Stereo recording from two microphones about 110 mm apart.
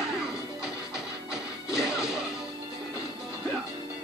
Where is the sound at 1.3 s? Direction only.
5° right (ahead or behind).